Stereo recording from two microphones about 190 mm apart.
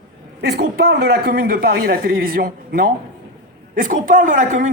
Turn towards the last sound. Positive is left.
turn(degrees=-45)  # may be behind; listen again after turning